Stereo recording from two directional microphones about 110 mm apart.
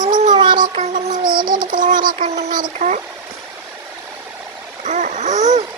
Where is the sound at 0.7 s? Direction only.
90° right.